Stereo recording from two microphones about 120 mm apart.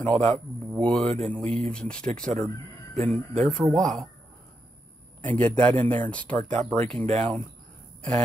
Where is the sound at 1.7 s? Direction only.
10° left (ahead or behind).